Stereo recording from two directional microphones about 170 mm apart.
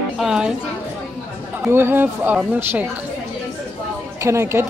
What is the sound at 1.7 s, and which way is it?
Speech, 15° right (ahead or behind).